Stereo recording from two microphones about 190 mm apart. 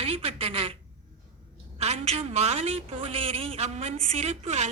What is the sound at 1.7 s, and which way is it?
A woman's voice, 35° right (ahead or behind).